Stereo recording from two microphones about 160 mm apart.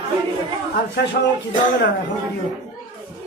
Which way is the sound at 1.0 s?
90° left.